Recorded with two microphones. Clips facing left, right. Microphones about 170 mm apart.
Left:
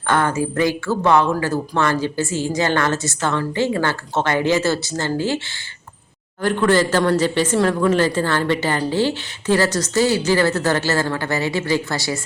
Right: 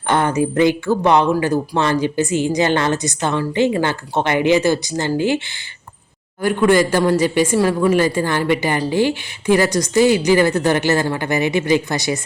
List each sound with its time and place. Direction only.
0.1 s a woman's voice: 20° right (ahead or behind)
6.4 s a woman's voice: 10° right (ahead or behind)